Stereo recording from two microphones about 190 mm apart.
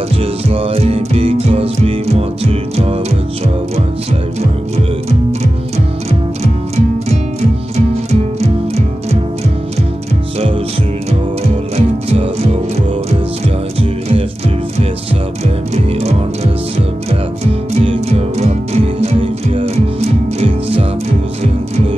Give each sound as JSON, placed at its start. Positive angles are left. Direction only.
{"t": 0.2, "sound": "music", "side_deg": -30}
{"t": 7.7, "sound": "music", "side_deg": -35}
{"t": 11.7, "sound": "music", "side_deg": -30}
{"t": 13.7, "sound": "music", "side_deg": -30}
{"t": 15.4, "sound": "music", "side_deg": -35}
{"t": 17.5, "sound": "music", "side_deg": -35}